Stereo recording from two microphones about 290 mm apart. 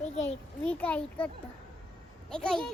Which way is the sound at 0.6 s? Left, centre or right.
Centre.